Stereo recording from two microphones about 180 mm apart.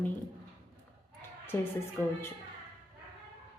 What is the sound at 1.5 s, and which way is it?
Speech, 15° left (ahead or behind).